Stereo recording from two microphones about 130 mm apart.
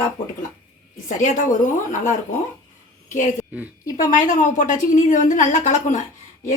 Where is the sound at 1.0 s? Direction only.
75° left (ahead or behind).